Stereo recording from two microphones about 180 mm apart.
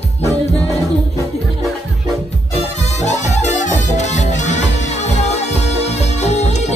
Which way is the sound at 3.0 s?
40° left (ahead or behind).